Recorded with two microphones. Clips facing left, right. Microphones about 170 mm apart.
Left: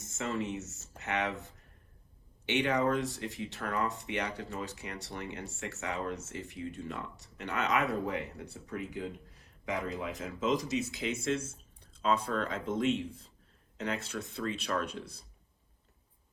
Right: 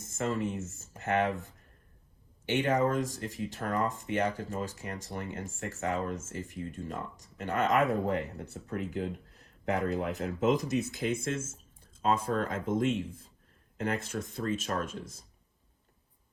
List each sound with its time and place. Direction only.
0.0 s speech: 50° right (ahead or behind)
2.5 s speech: 45° right (ahead or behind)